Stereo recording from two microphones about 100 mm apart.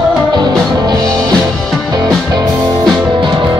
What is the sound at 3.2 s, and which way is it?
Music, 50° right (ahead or behind).